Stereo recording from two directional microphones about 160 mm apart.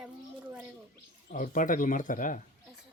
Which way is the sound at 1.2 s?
55° left (ahead or behind).